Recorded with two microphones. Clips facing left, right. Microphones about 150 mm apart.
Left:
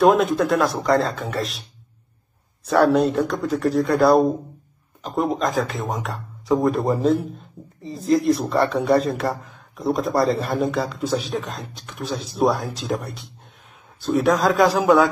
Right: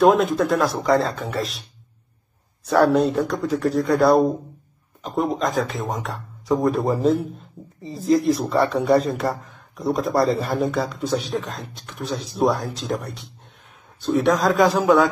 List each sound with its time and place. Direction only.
0.0 s speech: centre (ahead or behind)
2.6 s speech: centre (ahead or behind)